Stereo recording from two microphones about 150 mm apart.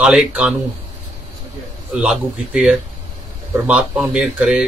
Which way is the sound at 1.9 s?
5° right (ahead or behind).